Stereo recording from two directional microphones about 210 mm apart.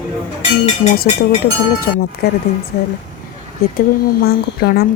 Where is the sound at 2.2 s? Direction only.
45° left (ahead or behind).